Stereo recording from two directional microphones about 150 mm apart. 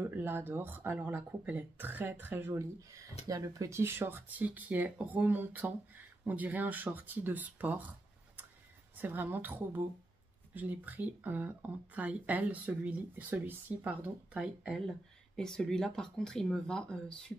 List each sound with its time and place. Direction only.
0.0 s speech: 15° right (ahead or behind)
8.9 s speech: 10° right (ahead or behind); by 17.3 s 5° left (ahead or behind)